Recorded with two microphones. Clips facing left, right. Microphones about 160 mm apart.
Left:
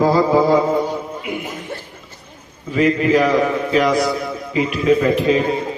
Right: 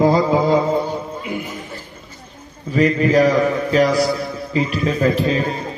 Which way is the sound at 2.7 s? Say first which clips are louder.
Even; 40° right (ahead or behind).